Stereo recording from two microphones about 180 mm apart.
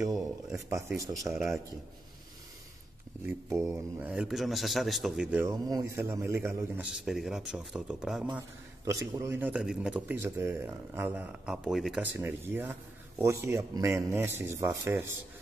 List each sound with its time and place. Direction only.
0.7 s a man's voice: 15° right (ahead or behind)
3.3 s a man's voice: 15° right (ahead or behind)
5.5 s a man's voice: 20° right (ahead or behind)